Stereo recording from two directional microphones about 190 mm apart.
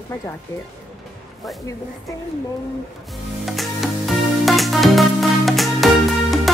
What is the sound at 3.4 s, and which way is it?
Music, centre (ahead or behind).